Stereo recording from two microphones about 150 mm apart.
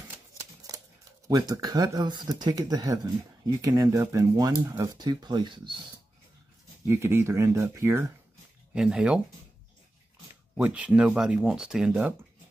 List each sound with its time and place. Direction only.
1.2 s speech: 25° right (ahead or behind)
6.9 s speech: 15° right (ahead or behind)
8.7 s speech: 5° right (ahead or behind)
10.5 s speech: 10° right (ahead or behind)